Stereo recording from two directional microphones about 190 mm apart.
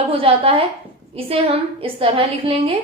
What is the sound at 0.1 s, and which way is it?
Speech, 30° right (ahead or behind).